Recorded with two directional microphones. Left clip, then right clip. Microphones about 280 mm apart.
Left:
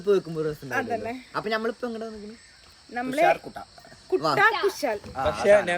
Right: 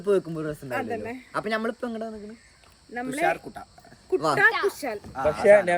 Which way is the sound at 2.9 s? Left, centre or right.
Centre.